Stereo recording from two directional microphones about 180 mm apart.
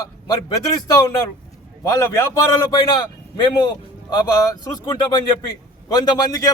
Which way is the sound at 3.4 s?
25° left (ahead or behind).